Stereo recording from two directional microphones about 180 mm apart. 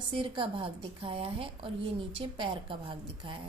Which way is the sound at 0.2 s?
30° right (ahead or behind).